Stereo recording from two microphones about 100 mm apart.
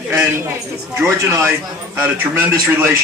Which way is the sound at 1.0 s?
25° right (ahead or behind).